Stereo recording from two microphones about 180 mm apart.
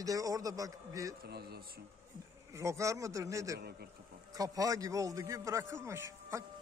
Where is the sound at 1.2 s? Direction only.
60° right (ahead or behind).